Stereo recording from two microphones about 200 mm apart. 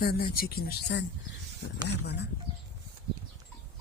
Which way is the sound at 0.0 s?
50° left (ahead or behind).